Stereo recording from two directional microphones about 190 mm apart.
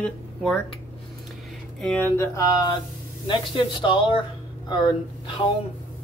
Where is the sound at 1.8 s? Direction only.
5° left (ahead or behind); by 5.5 s 25° left (ahead or behind).